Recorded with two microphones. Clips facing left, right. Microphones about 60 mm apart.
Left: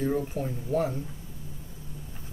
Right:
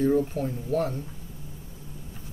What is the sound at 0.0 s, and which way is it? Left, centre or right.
Speech, centre.